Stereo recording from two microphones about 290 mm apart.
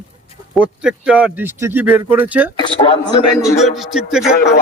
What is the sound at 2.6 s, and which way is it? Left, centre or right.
Speech, centre.